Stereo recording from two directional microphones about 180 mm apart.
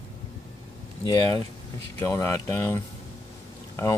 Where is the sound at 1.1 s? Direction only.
20° left (ahead or behind).